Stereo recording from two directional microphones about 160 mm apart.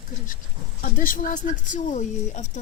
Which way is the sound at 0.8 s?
60° left (ahead or behind).